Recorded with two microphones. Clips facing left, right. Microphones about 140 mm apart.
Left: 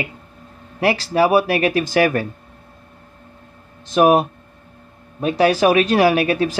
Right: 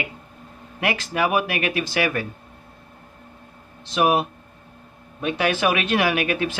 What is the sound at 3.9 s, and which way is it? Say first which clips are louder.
Speech: left 6 dB; 45° left (ahead or behind).